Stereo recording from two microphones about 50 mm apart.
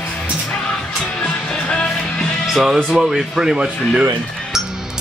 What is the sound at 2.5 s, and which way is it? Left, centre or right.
Speech, centre.